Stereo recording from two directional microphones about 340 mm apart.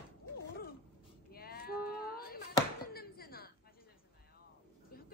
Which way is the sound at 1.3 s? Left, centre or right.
Left.